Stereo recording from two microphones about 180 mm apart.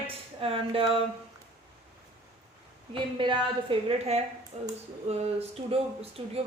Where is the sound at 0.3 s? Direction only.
30° right (ahead or behind).